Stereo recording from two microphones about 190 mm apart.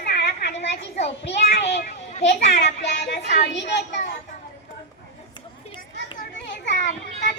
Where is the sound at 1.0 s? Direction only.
60° left (ahead or behind).